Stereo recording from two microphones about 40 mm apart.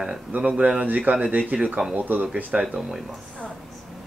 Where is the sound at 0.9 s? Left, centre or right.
Right.